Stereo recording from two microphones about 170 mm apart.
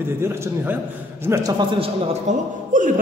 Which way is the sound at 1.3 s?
20° right (ahead or behind).